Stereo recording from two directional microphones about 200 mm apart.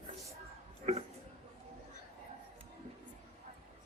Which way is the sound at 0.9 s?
35° right (ahead or behind).